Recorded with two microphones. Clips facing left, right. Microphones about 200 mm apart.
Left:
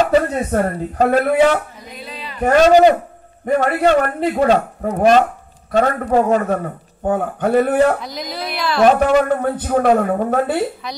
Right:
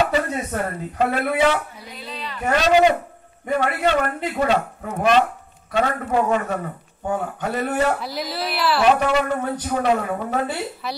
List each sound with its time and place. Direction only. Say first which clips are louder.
0.5 s a woman's voice: left 7 dB; 40° left (ahead or behind)
8.0 s speech: even; 5° right (ahead or behind)
8.8 s a woman's voice: left 7 dB; 50° left (ahead or behind)